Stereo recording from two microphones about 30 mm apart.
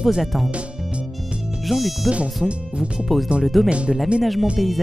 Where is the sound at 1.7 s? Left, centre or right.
Centre.